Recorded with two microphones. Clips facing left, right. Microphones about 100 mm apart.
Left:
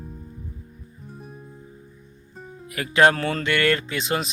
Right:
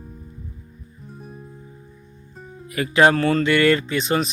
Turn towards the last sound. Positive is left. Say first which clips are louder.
# right 4 dB
turn(degrees=0)  # may be behind; listen again after turning